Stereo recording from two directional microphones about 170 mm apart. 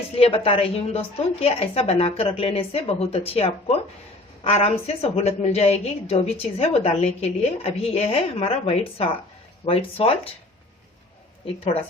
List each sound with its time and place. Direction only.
0.2 s a woman's voice: 35° left (ahead or behind)
11.4 s a woman's voice: 35° left (ahead or behind)